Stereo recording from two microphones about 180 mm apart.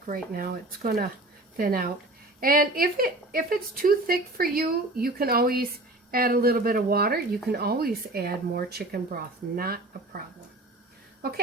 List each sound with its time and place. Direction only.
0.1 s a woman's voice: 50° right (ahead or behind)